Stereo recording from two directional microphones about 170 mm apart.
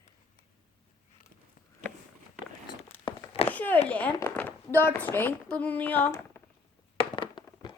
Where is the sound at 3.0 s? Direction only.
30° left (ahead or behind).